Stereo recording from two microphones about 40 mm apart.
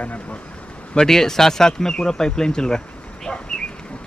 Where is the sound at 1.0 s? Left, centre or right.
Centre.